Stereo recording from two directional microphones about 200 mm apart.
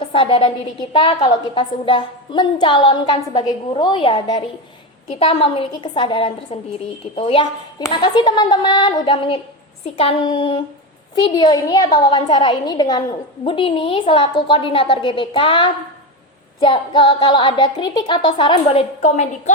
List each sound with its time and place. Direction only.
0.0 s a woman's voice: 25° left (ahead or behind)